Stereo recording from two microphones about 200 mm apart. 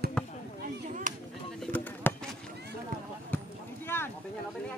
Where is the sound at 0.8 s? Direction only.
40° right (ahead or behind).